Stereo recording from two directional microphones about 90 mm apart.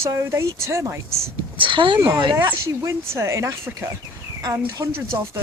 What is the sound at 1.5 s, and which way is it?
Speech, 70° right (ahead or behind).